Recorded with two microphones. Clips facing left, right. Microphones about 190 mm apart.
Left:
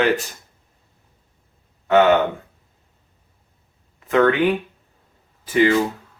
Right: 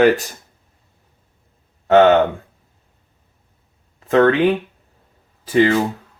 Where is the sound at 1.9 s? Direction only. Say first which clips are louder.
Right 3 dB; 35° right (ahead or behind).